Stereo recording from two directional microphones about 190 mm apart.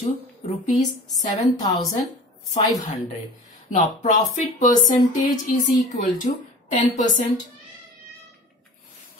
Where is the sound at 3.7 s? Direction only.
40° left (ahead or behind).